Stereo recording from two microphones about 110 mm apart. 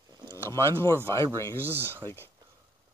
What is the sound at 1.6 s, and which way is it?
Speech, 20° right (ahead or behind).